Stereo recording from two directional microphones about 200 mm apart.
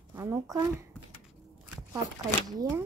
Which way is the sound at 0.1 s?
15° right (ahead or behind).